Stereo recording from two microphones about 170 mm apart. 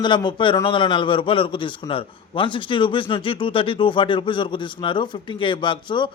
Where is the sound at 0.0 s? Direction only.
25° left (ahead or behind).